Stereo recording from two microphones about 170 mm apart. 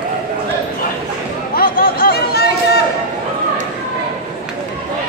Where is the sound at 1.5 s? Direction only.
55° left (ahead or behind).